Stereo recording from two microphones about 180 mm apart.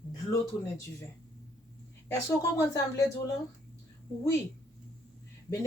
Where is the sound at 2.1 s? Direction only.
15° left (ahead or behind).